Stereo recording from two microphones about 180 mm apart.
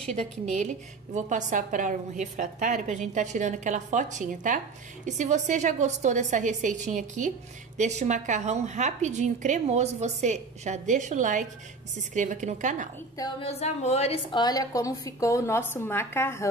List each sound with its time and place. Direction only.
0.1 s a woman's voice: 40° right (ahead or behind)
13.2 s a woman's voice: 35° left (ahead or behind); by 16.4 s 15° left (ahead or behind)